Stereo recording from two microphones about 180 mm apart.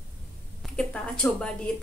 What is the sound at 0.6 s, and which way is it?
Speech, 5° left (ahead or behind).